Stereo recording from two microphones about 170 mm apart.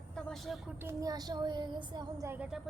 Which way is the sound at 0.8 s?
15° right (ahead or behind).